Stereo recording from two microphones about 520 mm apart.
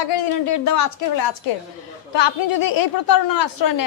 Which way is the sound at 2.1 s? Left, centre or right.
Left.